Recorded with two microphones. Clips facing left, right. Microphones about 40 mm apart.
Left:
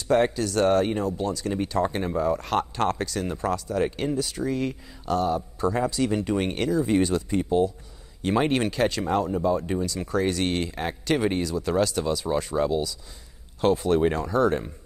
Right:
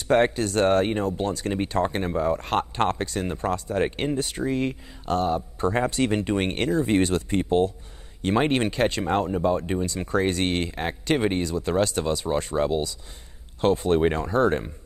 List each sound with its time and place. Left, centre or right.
0.1 s speech: right
2.0 s speech: right
6.2 s speech: right
8.3 s speech: centre